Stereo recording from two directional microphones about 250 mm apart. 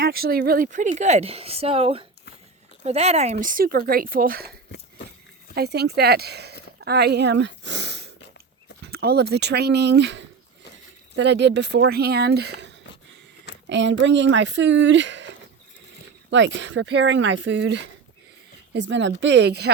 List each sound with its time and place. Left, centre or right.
0.0 s speech: right
5.5 s speech: right